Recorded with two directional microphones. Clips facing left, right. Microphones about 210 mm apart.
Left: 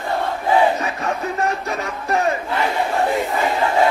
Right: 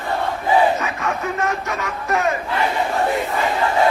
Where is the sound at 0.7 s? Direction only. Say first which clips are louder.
Even; 35° left (ahead or behind).